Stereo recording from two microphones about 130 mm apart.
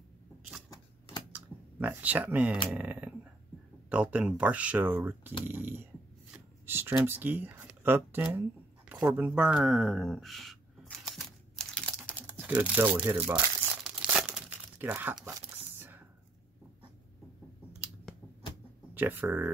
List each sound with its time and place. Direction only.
1.3 s typing: 15° right (ahead or behind)
2.7 s speech: 10° right (ahead or behind)
6.3 s a sound: 15° right (ahead or behind); by 12.2 s 5° left (ahead or behind)
12.2 s speech: 15° right (ahead or behind)
13.8 s tearing: 5° right (ahead or behind)
18.9 s speech: 15° right (ahead or behind)